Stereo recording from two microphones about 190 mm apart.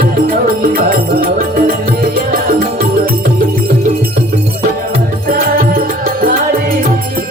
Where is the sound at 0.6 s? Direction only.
50° right (ahead or behind).